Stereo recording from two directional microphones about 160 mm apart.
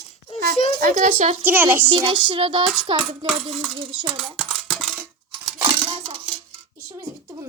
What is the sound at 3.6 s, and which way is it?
Speech, 30° right (ahead or behind).